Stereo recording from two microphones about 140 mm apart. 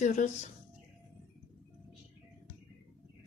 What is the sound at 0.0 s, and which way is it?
Speech, 60° left (ahead or behind).